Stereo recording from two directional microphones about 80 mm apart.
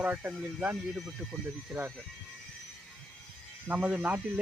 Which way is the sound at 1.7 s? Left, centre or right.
Centre.